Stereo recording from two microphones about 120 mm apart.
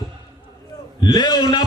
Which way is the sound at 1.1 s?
35° left (ahead or behind).